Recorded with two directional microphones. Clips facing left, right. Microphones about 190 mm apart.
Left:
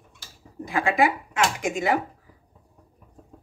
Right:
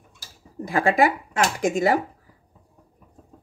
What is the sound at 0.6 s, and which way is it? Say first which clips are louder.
Speech: right 3 dB; 40° right (ahead or behind).